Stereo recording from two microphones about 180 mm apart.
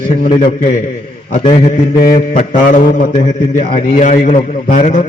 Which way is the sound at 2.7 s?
50° left (ahead or behind).